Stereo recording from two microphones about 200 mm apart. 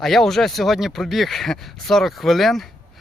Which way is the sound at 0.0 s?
Centre (ahead or behind).